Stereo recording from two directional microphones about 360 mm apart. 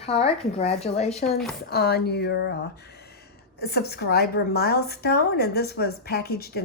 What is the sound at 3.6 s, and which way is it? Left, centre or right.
A woman's voice, left.